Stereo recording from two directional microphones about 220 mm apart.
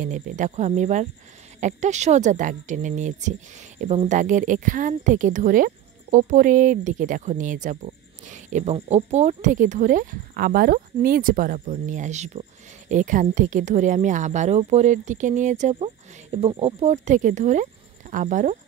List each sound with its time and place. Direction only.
0.0 s speech: 35° right (ahead or behind)